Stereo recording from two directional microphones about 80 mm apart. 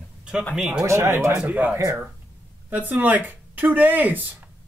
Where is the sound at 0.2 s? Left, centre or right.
Centre.